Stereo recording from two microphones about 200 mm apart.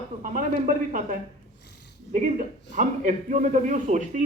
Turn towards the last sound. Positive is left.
turn(degrees=-40)  # may be behind; listen again after turning